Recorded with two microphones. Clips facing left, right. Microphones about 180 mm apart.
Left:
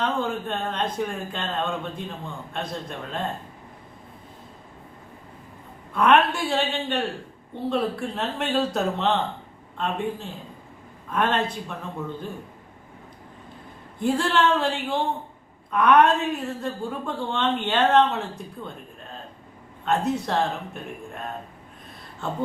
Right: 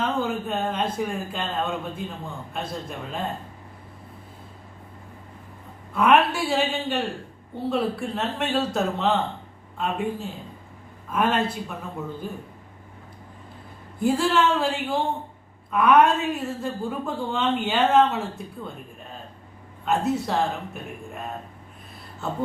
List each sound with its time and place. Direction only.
0.0 s a woman's voice: 5° right (ahead or behind)
5.9 s a woman's voice: 5° right (ahead or behind)
14.0 s a woman's voice: 5° right (ahead or behind)
19.8 s a woman's voice: 5° right (ahead or behind)